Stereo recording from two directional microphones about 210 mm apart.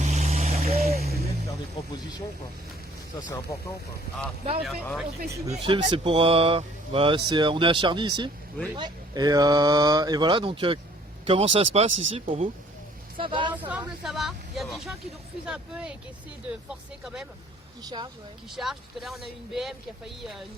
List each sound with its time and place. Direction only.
0.0 s vehicle: 35° right (ahead or behind)
0.6 s a sound: 30° right (ahead or behind)
3.2 s speech: 20° left (ahead or behind)
4.6 s speech: centre (ahead or behind)
5.3 s speech: 20° right (ahead or behind)
13.5 s speech: 5° right (ahead or behind)
17.8 s speech: 20° right (ahead or behind)
18.5 s speech: centre (ahead or behind)